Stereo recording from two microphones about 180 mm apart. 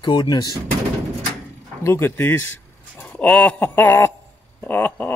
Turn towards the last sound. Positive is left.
turn(degrees=10)  # may be behind; listen again after turning